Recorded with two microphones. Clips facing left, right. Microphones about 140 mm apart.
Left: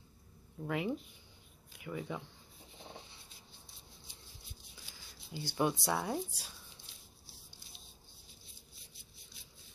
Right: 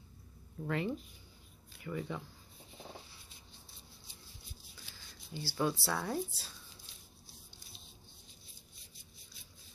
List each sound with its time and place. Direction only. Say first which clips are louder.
0.6 s speech: even; 10° left (ahead or behind)
5.4 s speech: left 1 dB; 20° left (ahead or behind)